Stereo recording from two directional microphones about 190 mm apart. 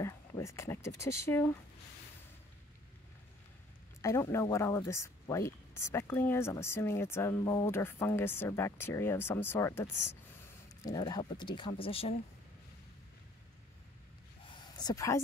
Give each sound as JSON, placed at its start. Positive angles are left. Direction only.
{"t": 0.0, "sound": "speech", "side_deg": 15}
{"t": 4.0, "sound": "speech", "side_deg": 15}
{"t": 14.4, "sound": "a sound", "side_deg": 25}